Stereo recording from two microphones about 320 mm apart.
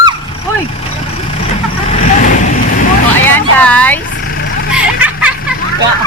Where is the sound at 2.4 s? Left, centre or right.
Left.